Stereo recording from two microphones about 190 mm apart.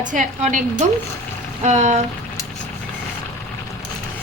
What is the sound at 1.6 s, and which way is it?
Speech, 40° right (ahead or behind).